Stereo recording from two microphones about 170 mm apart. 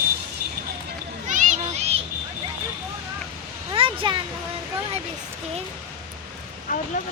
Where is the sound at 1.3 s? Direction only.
45° right (ahead or behind).